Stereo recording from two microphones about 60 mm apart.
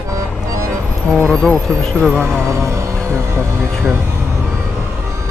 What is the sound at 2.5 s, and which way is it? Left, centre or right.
Music, right.